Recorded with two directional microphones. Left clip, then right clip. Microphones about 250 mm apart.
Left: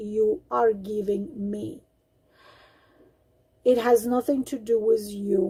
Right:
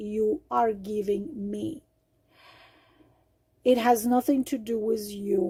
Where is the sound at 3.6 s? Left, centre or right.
Right.